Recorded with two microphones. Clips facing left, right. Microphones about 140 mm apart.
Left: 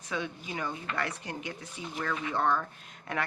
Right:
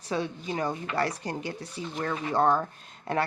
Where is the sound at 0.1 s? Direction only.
35° right (ahead or behind).